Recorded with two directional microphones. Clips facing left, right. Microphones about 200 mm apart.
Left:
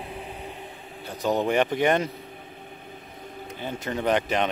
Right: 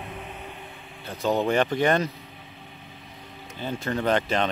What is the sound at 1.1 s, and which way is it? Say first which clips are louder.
Speech: even; 15° left (ahead or behind).